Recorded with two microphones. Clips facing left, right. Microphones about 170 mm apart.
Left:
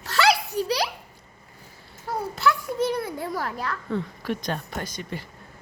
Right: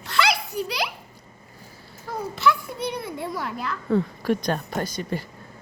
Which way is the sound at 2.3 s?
40° left (ahead or behind).